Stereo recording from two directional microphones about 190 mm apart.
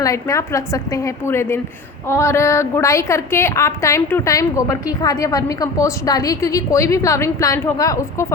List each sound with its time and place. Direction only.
0.0 s a woman's voice: 15° left (ahead or behind)